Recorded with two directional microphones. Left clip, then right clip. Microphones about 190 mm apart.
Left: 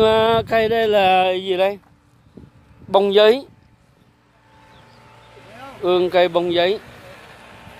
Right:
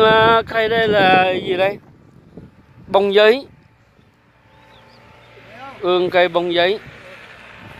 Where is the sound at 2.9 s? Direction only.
10° left (ahead or behind).